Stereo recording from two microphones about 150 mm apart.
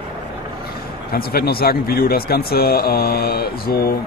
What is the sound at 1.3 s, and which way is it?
Speech, 90° left.